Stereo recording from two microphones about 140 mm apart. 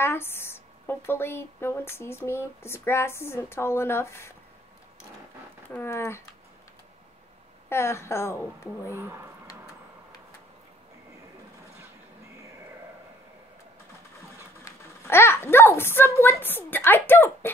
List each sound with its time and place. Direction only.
0.0 s speech: 15° left (ahead or behind)
5.7 s speech: 15° left (ahead or behind)
7.7 s speech: 20° left (ahead or behind)
8.9 s speech: 15° right (ahead or behind)
14.6 s a child's voice: 20° left (ahead or behind)